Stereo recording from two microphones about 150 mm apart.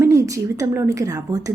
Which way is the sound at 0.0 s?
20° right (ahead or behind).